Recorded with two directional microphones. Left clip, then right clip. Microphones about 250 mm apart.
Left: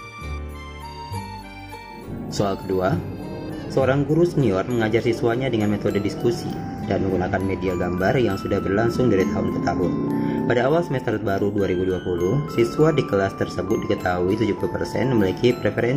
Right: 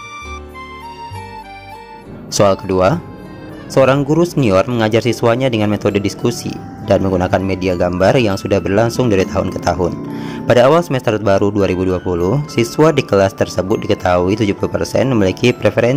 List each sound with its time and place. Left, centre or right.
2.3 s speech: right